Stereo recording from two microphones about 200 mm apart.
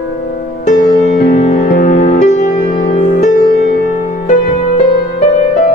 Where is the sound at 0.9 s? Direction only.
40° left (ahead or behind).